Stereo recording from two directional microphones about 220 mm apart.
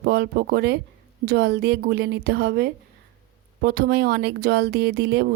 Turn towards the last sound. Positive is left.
turn(degrees=-50)  # may be behind; listen again after turning